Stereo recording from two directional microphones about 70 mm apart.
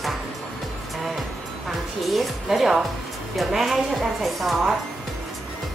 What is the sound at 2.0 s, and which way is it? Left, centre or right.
A woman's voice, centre.